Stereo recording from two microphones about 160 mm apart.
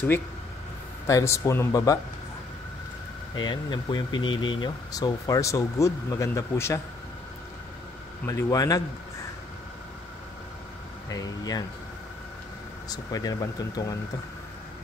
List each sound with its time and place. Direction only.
1.0 s speech: 20° left (ahead or behind)
3.3 s speech: 25° left (ahead or behind)
8.3 s speech: 20° left (ahead or behind)
11.1 s speech: 25° left (ahead or behind)
12.9 s speech: 25° left (ahead or behind)